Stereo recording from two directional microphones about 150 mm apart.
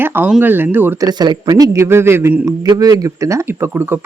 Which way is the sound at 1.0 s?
25° right (ahead or behind).